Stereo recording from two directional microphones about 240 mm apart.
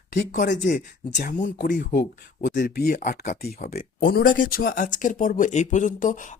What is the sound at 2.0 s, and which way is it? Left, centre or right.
Speech, left.